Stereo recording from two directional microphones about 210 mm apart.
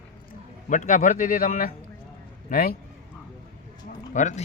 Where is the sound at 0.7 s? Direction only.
35° left (ahead or behind).